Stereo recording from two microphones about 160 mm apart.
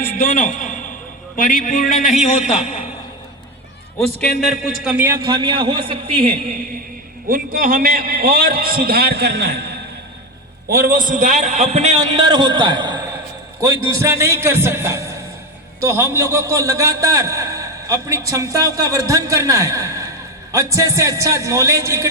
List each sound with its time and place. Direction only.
0.2 s a man's voice: 55° left (ahead or behind)
4.2 s a man's voice: 5° left (ahead or behind); by 6.5 s 40° right (ahead or behind)
7.3 s a man's voice: 60° right (ahead or behind); by 9.7 s 90° right
10.7 s a man's voice: 70° right (ahead or behind); by 13.0 s 25° right (ahead or behind)
13.7 s a man's voice: 35° left (ahead or behind)
14.0 s a man's voice: 15° right (ahead or behind)